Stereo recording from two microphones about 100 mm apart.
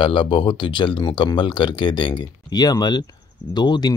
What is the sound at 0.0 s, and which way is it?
Speech, 60° left (ahead or behind).